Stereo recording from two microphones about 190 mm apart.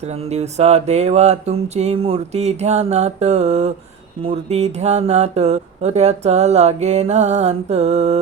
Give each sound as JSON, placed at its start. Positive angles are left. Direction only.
{"t": 0.3, "sound": "mantra", "side_deg": -35}